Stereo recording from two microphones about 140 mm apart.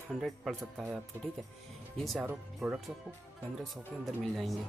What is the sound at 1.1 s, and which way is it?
Speech, 15° right (ahead or behind).